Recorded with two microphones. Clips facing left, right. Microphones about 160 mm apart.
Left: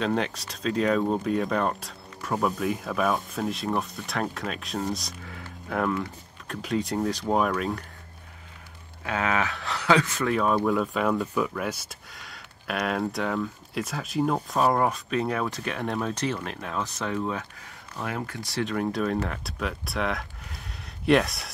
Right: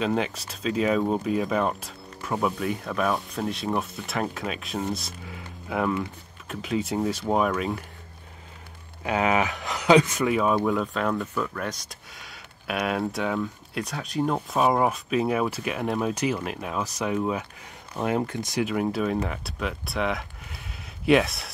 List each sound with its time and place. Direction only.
0.0 s speech: 5° right (ahead or behind)
5.2 s a sound: 10° right (ahead or behind)
6.4 s speech: 5° right (ahead or behind)
9.0 s speech: 15° right (ahead or behind)
10.3 s speech: 5° right (ahead or behind)
17.9 s speech: 25° right (ahead or behind)
18.7 s speech: 5° right (ahead or behind)